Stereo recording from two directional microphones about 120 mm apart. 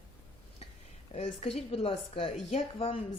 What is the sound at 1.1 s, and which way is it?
A woman's voice, 60° left (ahead or behind).